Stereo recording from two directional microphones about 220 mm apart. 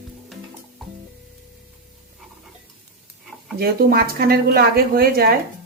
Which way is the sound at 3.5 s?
45° right (ahead or behind).